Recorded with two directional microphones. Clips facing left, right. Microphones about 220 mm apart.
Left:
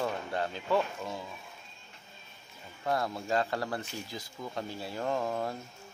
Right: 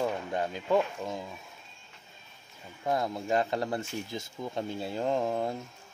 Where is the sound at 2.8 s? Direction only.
20° right (ahead or behind).